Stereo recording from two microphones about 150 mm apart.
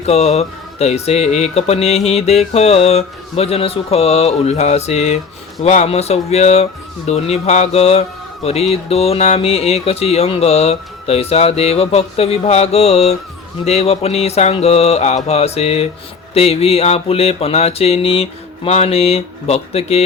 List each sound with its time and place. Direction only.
0.0 s speech: 45° left (ahead or behind)